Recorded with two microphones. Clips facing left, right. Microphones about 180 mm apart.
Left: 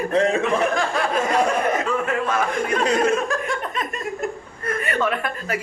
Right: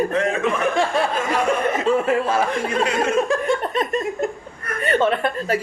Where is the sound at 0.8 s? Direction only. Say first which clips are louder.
Right 2 dB; 30° right (ahead or behind).